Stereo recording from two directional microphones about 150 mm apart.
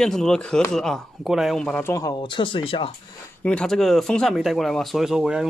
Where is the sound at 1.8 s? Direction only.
20° left (ahead or behind).